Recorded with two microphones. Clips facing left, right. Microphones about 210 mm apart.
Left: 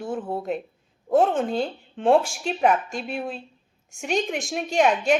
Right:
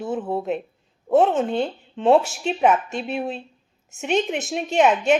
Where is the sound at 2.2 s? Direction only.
5° right (ahead or behind).